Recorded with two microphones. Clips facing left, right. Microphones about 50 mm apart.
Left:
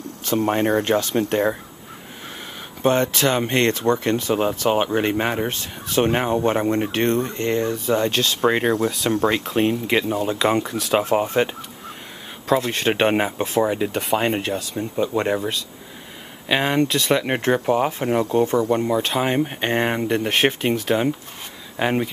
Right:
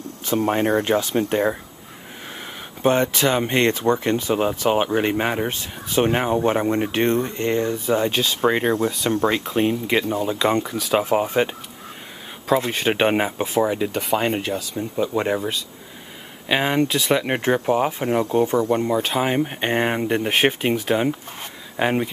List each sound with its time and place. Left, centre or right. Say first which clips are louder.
0.4 s speech: even; centre
2.8 s speech: even; right
3.3 s speech: even; centre
3.6 s speech: even; centre
4.6 s speech: even; centre
5.5 s speech: even; centre
6.0 s speech: even; centre
6.9 s speech: even; centre
8.5 s speech: even; centre
12.7 s speech: even; centre